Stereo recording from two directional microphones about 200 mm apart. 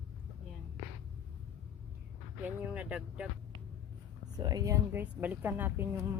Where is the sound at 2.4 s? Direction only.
5° right (ahead or behind).